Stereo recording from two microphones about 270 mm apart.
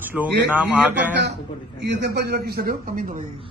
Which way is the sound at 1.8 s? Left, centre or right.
Right.